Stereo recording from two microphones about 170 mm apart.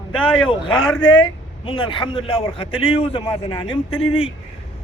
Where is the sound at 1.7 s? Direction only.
30° left (ahead or behind).